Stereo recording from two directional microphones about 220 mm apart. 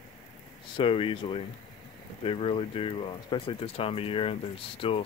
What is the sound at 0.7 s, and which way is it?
Speech, 25° left (ahead or behind).